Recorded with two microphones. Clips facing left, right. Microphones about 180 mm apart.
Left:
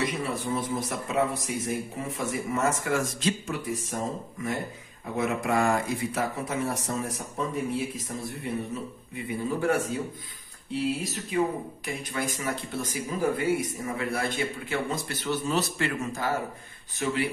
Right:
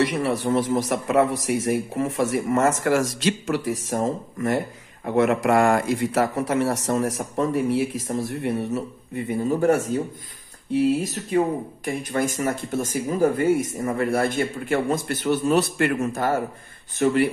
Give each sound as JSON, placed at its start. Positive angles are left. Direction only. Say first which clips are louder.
{"t": 0.0, "sound": "a man's voice", "louder": "right 7 dB", "side_deg": -75}
{"t": 9.1, "sound": "speech", "louder": "right 7 dB", "side_deg": -45}
{"t": 11.0, "sound": "speech", "louder": "right 5 dB", "side_deg": -45}